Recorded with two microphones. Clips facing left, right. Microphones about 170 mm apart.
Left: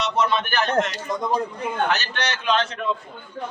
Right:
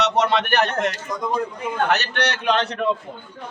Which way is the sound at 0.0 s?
75° right (ahead or behind).